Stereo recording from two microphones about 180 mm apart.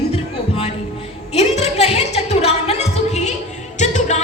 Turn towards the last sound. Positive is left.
turn(degrees=40)  # may be behind; listen again after turning